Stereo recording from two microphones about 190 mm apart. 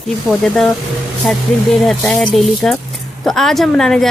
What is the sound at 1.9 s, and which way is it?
Speech, centre (ahead or behind).